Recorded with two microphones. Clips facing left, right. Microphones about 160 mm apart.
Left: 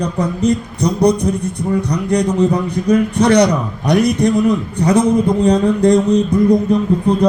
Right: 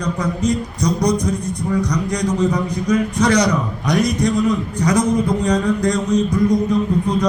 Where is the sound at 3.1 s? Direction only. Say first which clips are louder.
Left 4 dB; 60° left (ahead or behind).